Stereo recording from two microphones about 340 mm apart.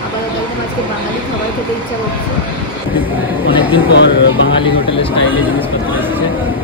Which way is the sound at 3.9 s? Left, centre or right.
Left.